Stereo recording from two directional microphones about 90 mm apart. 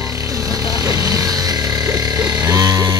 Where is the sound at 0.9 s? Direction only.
40° right (ahead or behind).